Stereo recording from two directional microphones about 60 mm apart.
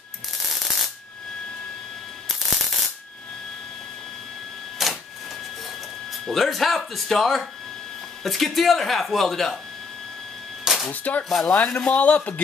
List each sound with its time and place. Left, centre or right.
0.5 s a sound: centre
2.2 s a sound: centre
4.8 s printer: centre
6.2 s speech: centre
10.6 s music: centre
10.9 s a man's voice: left